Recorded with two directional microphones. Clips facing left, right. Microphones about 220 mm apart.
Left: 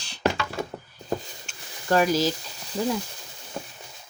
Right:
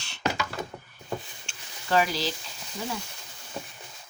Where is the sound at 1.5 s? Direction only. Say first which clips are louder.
Left 2 dB; 30° right (ahead or behind).